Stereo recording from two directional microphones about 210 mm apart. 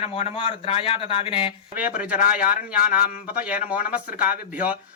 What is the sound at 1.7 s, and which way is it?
Speech, 5° right (ahead or behind).